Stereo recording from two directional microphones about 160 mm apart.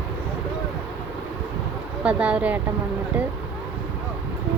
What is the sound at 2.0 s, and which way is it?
Speech, 5° right (ahead or behind).